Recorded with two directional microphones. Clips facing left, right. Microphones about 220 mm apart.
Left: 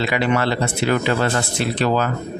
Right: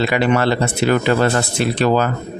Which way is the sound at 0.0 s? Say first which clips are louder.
Right 3 dB; 45° right (ahead or behind).